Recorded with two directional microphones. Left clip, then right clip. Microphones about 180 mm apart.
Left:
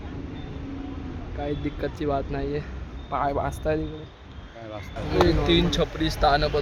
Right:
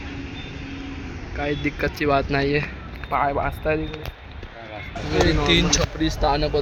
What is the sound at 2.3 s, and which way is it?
Speech, 20° right (ahead or behind).